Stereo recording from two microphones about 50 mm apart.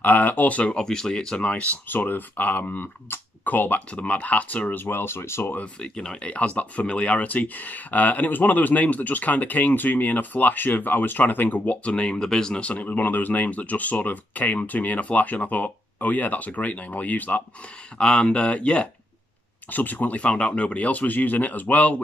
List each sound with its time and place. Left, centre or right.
0.0 s speech: left
0.7 s speech: centre; by 1.8 s left
1.9 s speech: left
4.7 s speech: left
5.4 s speech: left
5.8 s speech: centre
12.6 s speech: left
17.9 s speech: centre
19.7 s speech: left